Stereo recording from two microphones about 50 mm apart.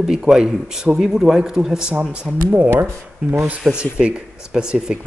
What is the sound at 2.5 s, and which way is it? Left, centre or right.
Speech, right.